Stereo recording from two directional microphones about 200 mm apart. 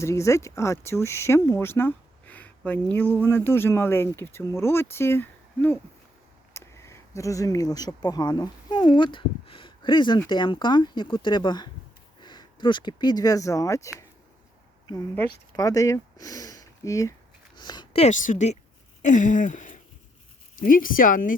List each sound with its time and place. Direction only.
0.0 s speech: 15° left (ahead or behind); by 18.5 s 40° left (ahead or behind)
19.0 s a sound: 40° left (ahead or behind)
20.6 s speech: 45° left (ahead or behind)